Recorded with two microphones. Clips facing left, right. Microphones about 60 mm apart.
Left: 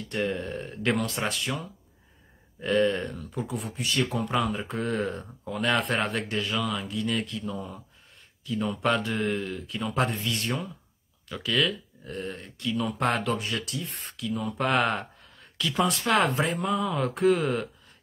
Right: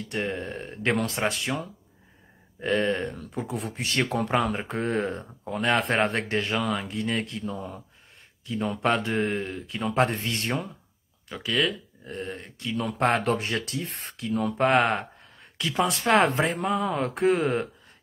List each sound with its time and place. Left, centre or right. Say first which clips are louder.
0.2 s speech: left 2 dB; right